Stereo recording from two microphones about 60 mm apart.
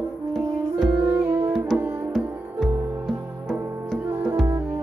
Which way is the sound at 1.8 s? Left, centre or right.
Right.